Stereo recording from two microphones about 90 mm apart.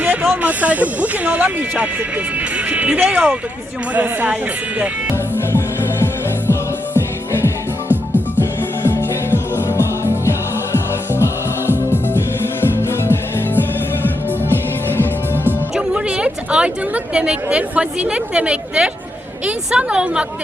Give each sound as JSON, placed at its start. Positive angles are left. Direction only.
{"t": 0.0, "sound": "a sound", "side_deg": -15}
{"t": 0.4, "sound": "speech", "side_deg": -15}
{"t": 5.5, "sound": "music", "side_deg": 30}
{"t": 8.4, "sound": "music", "side_deg": 25}
{"t": 14.5, "sound": "music", "side_deg": 25}
{"t": 15.7, "sound": "a woman's voice", "side_deg": -10}